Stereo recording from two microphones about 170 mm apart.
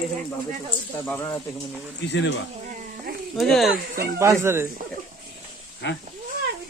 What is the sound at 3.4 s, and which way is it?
Speech, centre (ahead or behind).